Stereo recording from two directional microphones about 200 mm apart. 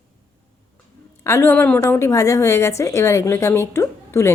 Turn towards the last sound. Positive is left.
turn(degrees=15)  # may be behind; listen again after turning